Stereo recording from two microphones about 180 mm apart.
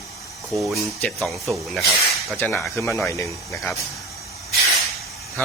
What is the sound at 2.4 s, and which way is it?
Speech, 10° left (ahead or behind).